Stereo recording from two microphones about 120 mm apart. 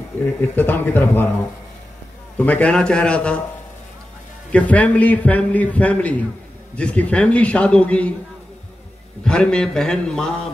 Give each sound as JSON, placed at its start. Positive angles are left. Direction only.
{"t": 0.6, "sound": "a man's voice", "side_deg": 15}
{"t": 2.3, "sound": "a man's voice", "side_deg": 10}
{"t": 4.5, "sound": "a man's voice", "side_deg": 10}
{"t": 9.2, "sound": "a man's voice", "side_deg": 5}